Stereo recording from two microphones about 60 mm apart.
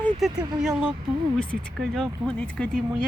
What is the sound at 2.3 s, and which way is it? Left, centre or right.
Speech, centre.